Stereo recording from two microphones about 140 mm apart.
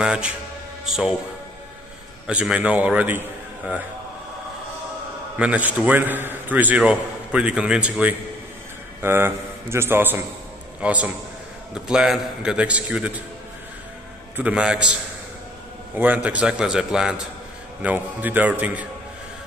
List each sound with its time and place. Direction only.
0.0 s a man's voice: 5° right (ahead or behind)
2.2 s a man's voice: 5° right (ahead or behind)
5.4 s a man's voice: 10° right (ahead or behind)
14.3 s a man's voice: 10° right (ahead or behind)
16.0 s a man's voice: 10° right (ahead or behind)